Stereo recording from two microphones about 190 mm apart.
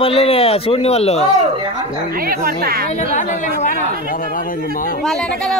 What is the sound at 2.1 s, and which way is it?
Speech, 50° right (ahead or behind).